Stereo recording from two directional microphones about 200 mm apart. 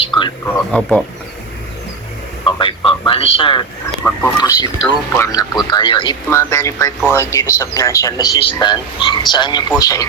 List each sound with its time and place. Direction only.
0.0 s a sound: 25° left (ahead or behind)
0.4 s speech: 10° left (ahead or behind)
2.4 s a man's voice: 25° left (ahead or behind)
4.0 s speech: 10° left (ahead or behind)